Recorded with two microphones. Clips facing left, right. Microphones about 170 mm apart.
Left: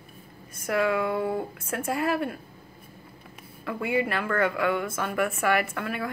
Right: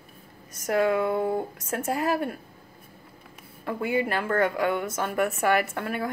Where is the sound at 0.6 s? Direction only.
40° right (ahead or behind).